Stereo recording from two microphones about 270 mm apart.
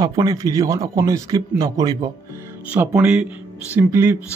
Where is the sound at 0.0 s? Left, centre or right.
Centre.